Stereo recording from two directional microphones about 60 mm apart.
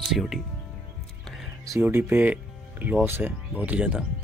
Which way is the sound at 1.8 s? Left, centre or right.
Right.